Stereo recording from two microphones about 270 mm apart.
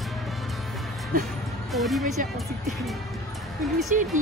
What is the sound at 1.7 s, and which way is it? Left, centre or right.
Speech, centre.